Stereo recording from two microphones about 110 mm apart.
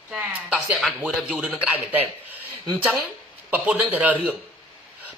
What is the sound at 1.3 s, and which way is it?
A man's voice, 10° right (ahead or behind).